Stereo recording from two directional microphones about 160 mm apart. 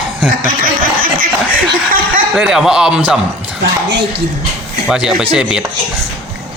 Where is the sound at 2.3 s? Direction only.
5° right (ahead or behind).